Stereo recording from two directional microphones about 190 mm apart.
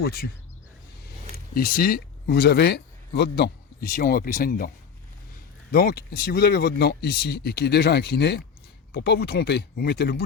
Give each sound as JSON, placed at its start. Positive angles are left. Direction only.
{"t": 0.0, "sound": "speech", "side_deg": 55}
{"t": 1.5, "sound": "speech", "side_deg": 50}
{"t": 5.7, "sound": "speech", "side_deg": 55}